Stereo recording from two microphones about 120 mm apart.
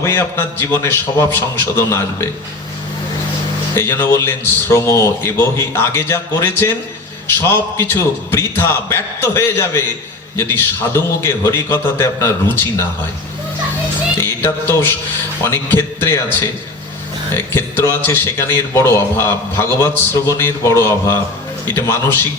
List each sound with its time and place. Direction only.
0.0 s a man's voice: 20° left (ahead or behind)
3.8 s a man's voice: 20° left (ahead or behind)
14.2 s a man's voice: 20° left (ahead or behind)